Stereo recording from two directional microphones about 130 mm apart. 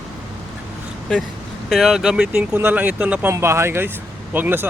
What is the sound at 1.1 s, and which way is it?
Speech, 5° left (ahead or behind).